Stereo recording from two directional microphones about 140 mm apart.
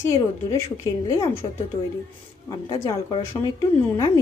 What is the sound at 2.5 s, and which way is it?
A woman's voice, 30° left (ahead or behind).